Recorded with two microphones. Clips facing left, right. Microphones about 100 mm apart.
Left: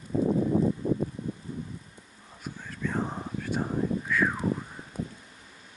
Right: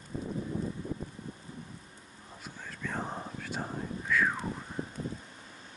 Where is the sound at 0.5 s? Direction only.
35° left (ahead or behind).